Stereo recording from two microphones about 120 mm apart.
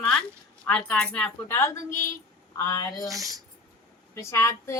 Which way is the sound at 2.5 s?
25° left (ahead or behind).